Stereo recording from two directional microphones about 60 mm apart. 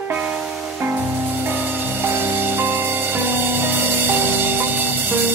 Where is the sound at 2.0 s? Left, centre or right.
Right.